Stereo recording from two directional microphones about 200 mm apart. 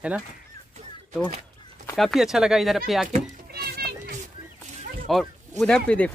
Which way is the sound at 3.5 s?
50° right (ahead or behind).